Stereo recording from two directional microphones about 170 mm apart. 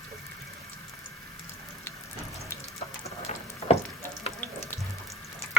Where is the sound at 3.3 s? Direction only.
40° left (ahead or behind).